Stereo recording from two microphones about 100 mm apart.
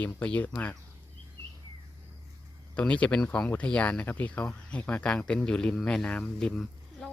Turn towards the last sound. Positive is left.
turn(degrees=5)  # may be behind; listen again after turning